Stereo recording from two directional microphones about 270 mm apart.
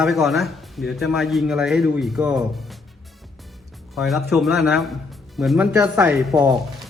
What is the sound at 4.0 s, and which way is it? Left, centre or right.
Speech, centre.